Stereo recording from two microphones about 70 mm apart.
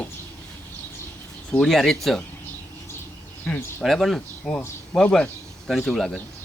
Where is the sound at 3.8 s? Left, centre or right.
Centre.